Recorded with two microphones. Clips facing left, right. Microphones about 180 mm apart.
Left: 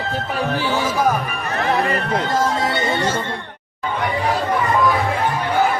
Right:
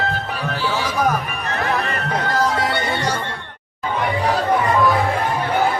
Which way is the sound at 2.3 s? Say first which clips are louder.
Right 2 dB; 25° left (ahead or behind).